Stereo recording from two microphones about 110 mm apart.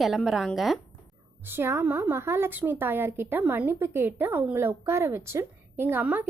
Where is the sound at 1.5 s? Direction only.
20° right (ahead or behind).